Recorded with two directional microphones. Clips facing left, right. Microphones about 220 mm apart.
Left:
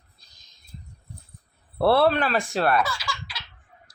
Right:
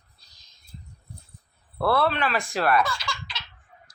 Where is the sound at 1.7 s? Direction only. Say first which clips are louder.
Left 4 dB; 30° left (ahead or behind).